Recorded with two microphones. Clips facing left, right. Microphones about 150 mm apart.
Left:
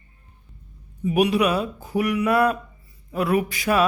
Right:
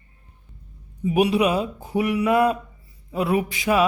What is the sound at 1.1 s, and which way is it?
A man's voice, 25° right (ahead or behind).